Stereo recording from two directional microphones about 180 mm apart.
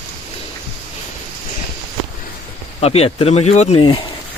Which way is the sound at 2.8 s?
35° left (ahead or behind).